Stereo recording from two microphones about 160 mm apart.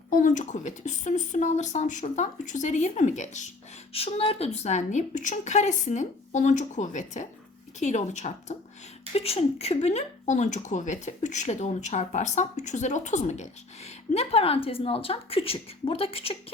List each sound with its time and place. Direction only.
0.1 s speech: 55° left (ahead or behind)
3.9 s speech: 35° left (ahead or behind)